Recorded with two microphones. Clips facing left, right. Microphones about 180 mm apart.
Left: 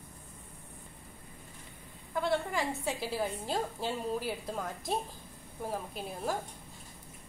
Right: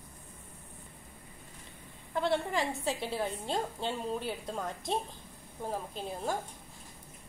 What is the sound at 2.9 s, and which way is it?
A woman's voice, centre (ahead or behind).